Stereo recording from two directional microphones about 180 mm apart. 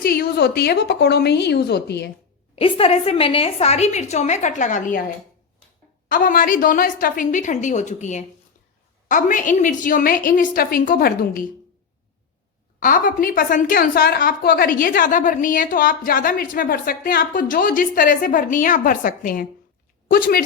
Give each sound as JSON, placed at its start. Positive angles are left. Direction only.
{"t": 0.0, "sound": "a woman's voice", "side_deg": 55}
{"t": 2.6, "sound": "a woman's voice", "side_deg": 30}
{"t": 6.1, "sound": "a woman's voice", "side_deg": 50}
{"t": 12.8, "sound": "a woman's voice", "side_deg": 50}